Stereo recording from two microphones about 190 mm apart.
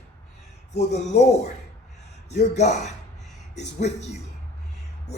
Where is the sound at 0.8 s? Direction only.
35° left (ahead or behind).